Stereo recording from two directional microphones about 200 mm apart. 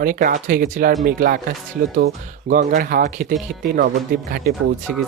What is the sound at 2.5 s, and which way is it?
Speech, 45° right (ahead or behind).